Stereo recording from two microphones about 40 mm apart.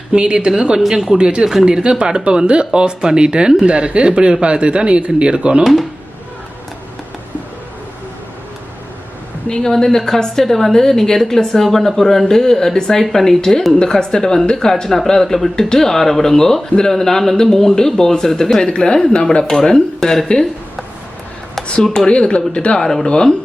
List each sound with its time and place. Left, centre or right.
0.1 s speech: right
0.8 s speech: centre
1.2 s speech: right
9.6 s a woman's voice: centre
13.7 s a woman's voice: centre
21.9 s speech: left
22.8 s a woman's voice: centre